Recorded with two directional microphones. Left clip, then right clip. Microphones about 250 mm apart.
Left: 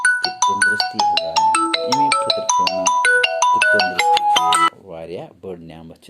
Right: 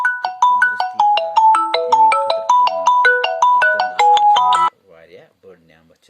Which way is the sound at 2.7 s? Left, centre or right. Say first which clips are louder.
Right 3 dB; left.